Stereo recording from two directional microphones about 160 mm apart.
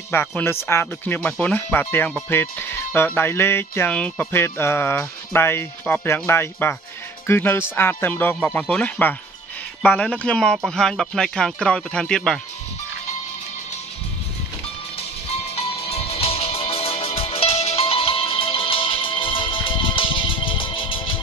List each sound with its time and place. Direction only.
0.3 s music: 10° left (ahead or behind)
9.8 s speech: 5° left (ahead or behind)
15.5 s music: 40° left (ahead or behind)